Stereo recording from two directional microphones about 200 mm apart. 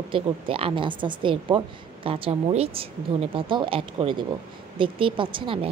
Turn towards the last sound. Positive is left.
turn(degrees=-25)  # may be behind; listen again after turning